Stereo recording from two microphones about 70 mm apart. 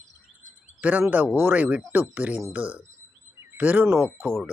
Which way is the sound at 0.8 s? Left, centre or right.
Right.